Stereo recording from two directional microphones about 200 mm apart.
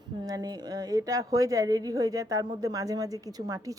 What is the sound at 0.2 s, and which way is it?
A woman's voice, 20° right (ahead or behind).